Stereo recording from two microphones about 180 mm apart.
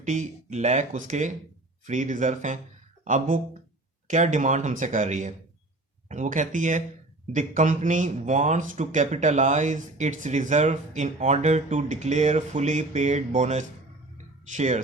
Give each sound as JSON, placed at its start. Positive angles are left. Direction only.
{"t": 0.0, "sound": "speech", "side_deg": -45}